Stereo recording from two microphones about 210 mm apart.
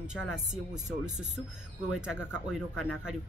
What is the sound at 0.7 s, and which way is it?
Speech, 35° right (ahead or behind).